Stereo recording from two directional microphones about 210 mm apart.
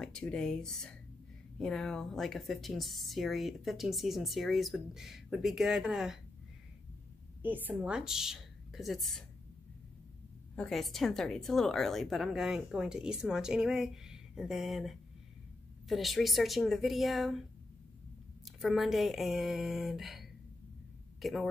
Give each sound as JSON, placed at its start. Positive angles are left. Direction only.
{"t": 0.0, "sound": "speech", "side_deg": 5}
{"t": 7.4, "sound": "speech", "side_deg": -10}
{"t": 10.5, "sound": "speech", "side_deg": 5}
{"t": 18.4, "sound": "speech", "side_deg": 0}